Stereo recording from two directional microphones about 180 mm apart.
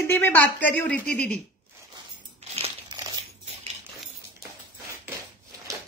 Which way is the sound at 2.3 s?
35° right (ahead or behind).